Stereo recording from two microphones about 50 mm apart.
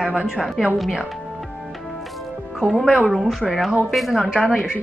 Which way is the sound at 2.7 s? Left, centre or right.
Centre.